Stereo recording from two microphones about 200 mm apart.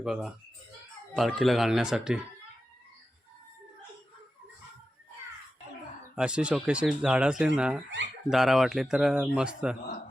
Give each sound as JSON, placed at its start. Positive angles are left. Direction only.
{"t": 0.0, "sound": "speech", "side_deg": 0}
{"t": 6.1, "sound": "speech", "side_deg": -5}